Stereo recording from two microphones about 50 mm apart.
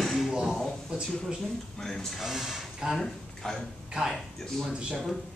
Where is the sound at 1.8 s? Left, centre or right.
Centre.